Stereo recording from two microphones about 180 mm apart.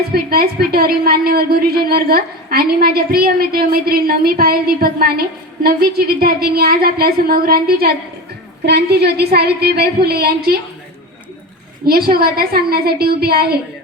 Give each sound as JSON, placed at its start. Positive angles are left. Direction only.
{"t": 0.1, "sound": "a woman's voice", "side_deg": -55}
{"t": 11.9, "sound": "a woman's voice", "side_deg": -55}